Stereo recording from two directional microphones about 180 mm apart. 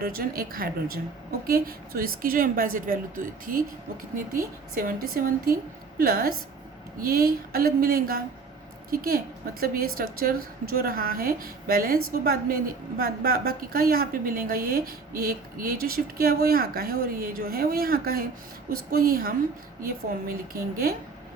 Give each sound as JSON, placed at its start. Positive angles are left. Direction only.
{"t": 0.0, "sound": "a woman's voice", "side_deg": -55}
{"t": 4.7, "sound": "a woman's voice", "side_deg": -55}